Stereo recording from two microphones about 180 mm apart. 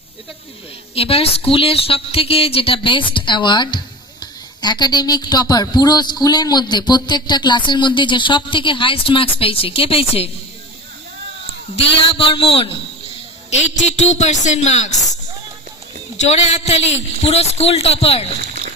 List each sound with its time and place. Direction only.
0.9 s a woman's voice: 30° left (ahead or behind)
12.0 s a woman's voice: 30° left (ahead or behind)
16.2 s a man's voice: 40° left (ahead or behind)